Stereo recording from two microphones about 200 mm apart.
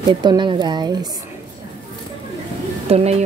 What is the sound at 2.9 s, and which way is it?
Speech, 30° right (ahead or behind).